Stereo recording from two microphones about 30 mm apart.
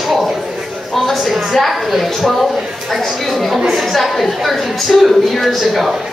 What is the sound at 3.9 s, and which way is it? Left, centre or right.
A woman's voice, centre.